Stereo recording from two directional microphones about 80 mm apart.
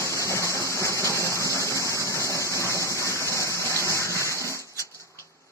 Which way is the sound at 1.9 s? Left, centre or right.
Left.